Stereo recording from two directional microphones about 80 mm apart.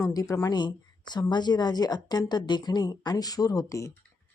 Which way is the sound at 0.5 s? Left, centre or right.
Left.